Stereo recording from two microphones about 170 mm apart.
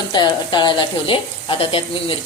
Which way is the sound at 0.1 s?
25° left (ahead or behind).